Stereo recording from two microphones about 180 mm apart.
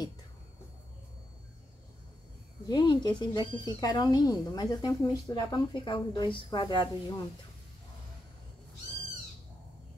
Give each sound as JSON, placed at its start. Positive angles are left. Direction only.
{"t": 2.6, "sound": "speech", "side_deg": 25}